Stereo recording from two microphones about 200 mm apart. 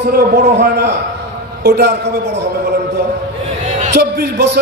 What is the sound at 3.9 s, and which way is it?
Speech, 55° right (ahead or behind).